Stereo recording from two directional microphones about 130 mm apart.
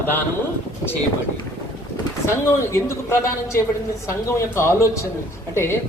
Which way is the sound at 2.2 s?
20° left (ahead or behind).